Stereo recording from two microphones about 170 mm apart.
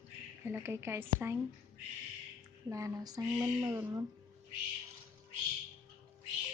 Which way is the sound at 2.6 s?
20° right (ahead or behind).